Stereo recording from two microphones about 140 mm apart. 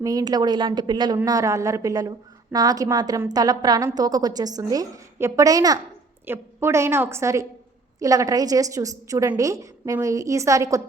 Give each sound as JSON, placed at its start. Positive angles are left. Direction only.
{"t": 0.0, "sound": "a woman's voice", "side_deg": -25}